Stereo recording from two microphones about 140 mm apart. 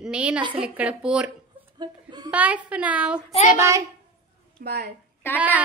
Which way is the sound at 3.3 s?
50° left (ahead or behind).